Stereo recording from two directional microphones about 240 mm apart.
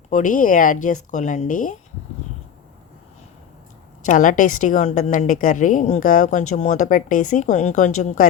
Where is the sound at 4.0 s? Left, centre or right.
Left.